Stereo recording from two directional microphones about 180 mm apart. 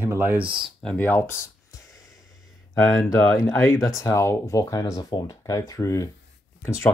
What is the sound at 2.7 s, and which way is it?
Speech, 15° left (ahead or behind).